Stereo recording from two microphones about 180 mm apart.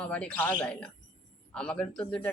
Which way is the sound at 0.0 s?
5° left (ahead or behind).